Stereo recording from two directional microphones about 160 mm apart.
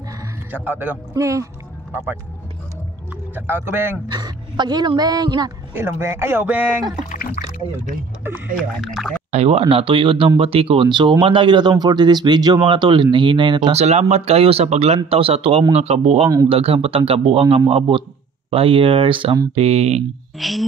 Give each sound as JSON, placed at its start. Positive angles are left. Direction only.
{"t": 0.7, "sound": "a woman's voice", "side_deg": -15}
{"t": 3.3, "sound": "speech", "side_deg": -15}
{"t": 4.1, "sound": "a woman's voice", "side_deg": -25}
{"t": 5.7, "sound": "speech", "side_deg": -15}
{"t": 7.1, "sound": "a sound", "side_deg": 50}
{"t": 8.8, "sound": "speech", "side_deg": 0}
{"t": 9.3, "sound": "speech", "side_deg": -40}
{"t": 20.3, "sound": "speech", "side_deg": 0}